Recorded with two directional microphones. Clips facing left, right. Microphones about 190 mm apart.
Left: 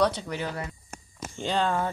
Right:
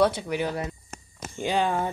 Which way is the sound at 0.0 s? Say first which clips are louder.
Right 3 dB; 10° right (ahead or behind).